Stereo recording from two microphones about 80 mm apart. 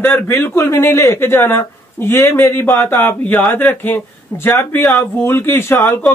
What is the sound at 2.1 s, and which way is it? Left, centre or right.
Speech, left.